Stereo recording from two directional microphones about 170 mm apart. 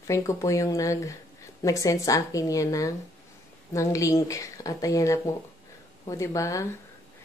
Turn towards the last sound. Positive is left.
turn(degrees=20)  # may be behind; listen again after turning